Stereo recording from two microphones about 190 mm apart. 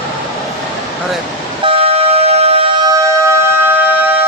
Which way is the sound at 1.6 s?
30° right (ahead or behind).